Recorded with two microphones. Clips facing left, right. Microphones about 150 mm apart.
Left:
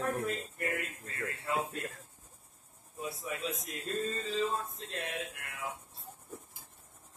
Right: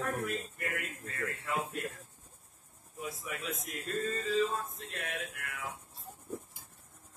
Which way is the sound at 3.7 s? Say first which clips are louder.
Right 2 dB; 30° left (ahead or behind).